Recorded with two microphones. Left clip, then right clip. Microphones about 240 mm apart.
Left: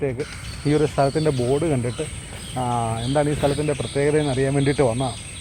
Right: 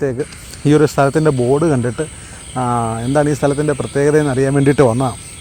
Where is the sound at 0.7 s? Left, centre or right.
Right.